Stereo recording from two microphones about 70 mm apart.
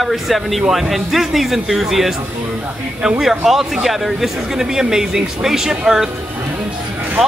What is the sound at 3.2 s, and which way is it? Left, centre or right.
Speech, centre.